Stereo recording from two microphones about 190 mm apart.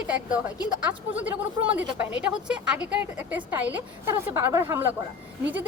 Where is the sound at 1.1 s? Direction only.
10° right (ahead or behind).